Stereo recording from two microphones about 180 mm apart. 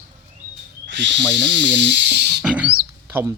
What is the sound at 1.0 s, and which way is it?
Speech, 80° right.